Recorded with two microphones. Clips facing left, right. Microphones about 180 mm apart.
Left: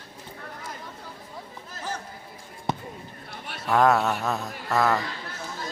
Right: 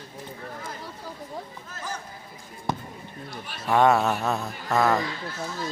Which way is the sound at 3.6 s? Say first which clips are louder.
Right 1 dB; centre (ahead or behind).